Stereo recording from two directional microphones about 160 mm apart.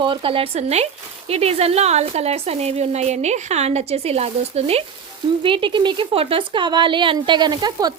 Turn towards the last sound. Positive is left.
turn(degrees=-25)  # may be behind; listen again after turning